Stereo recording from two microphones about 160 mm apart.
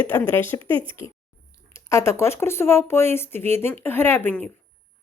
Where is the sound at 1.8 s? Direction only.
15° left (ahead or behind).